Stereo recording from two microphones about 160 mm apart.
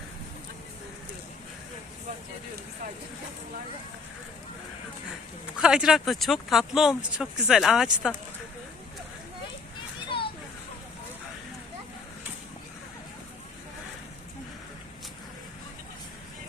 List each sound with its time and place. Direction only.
5.5 s speech: 5° right (ahead or behind)
10.1 s children playing: 30° left (ahead or behind)